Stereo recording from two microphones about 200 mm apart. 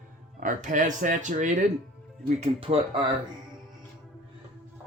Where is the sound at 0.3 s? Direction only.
40° right (ahead or behind).